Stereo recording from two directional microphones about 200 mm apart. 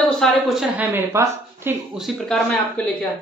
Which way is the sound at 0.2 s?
Centre (ahead or behind).